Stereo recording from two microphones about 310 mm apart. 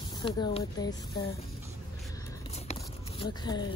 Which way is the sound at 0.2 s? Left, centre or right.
Centre.